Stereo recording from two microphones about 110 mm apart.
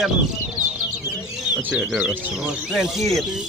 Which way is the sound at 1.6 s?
10° right (ahead or behind).